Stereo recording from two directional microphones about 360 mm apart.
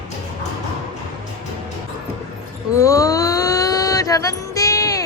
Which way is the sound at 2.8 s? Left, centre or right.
Centre.